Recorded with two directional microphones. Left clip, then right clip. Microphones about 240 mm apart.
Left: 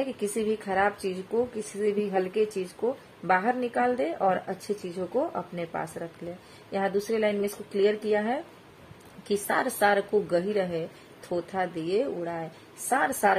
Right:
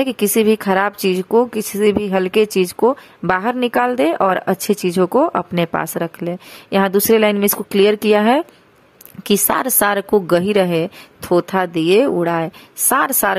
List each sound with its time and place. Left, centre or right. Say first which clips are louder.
0.0 s speech: right 13 dB; right